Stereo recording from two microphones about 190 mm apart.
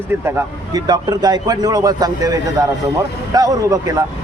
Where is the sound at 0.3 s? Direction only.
15° right (ahead or behind).